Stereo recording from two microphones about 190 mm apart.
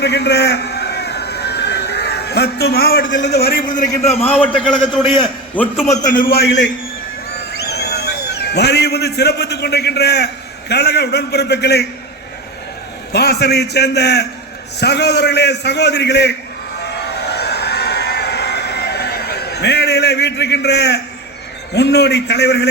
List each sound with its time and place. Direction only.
0.0 s a sound: 60° left (ahead or behind)
3.0 s a man's voice: 80° left
3.3 s a man's voice: 55° left (ahead or behind)
4.2 s a man's voice: 10° left (ahead or behind)
5.5 s a man's voice: 10° left (ahead or behind)
6.1 s a man's voice: 50° left (ahead or behind)
13.1 s a man's voice: 60° left (ahead or behind)
16.8 s a sound: 60° left (ahead or behind)
21.8 s a man's voice: 60° left (ahead or behind)